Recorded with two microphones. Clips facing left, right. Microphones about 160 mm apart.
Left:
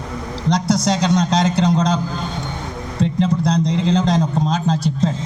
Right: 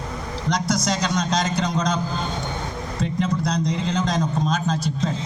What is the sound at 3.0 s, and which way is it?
A man's voice, 25° left (ahead or behind).